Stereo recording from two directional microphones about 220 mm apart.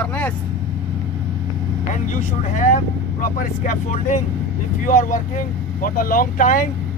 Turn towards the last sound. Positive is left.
turn(degrees=40)  # may be behind; listen again after turning